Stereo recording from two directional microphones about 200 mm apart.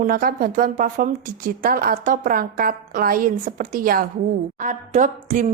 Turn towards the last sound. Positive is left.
turn(degrees=-40)  # may be behind; listen again after turning